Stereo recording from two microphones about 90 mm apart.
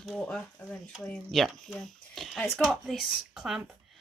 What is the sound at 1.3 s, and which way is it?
Speech, centre (ahead or behind).